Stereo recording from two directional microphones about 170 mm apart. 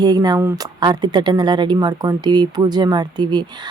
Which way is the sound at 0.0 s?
25° right (ahead or behind).